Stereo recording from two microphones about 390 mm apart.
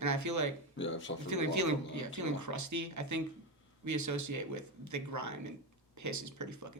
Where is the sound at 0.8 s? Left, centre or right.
Left.